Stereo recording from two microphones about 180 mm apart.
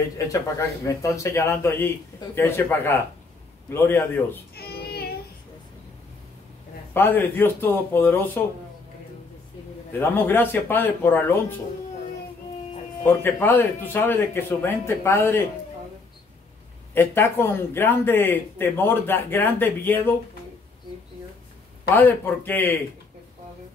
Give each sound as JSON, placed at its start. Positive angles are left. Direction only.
{"t": 0.3, "sound": "speech", "side_deg": 15}
{"t": 4.6, "sound": "child singing", "side_deg": 60}
{"t": 6.9, "sound": "speech", "side_deg": 10}
{"t": 9.9, "sound": "speech", "side_deg": 10}
{"t": 13.0, "sound": "speech", "side_deg": 10}
{"t": 16.9, "sound": "speech", "side_deg": 10}
{"t": 21.9, "sound": "speech", "side_deg": 10}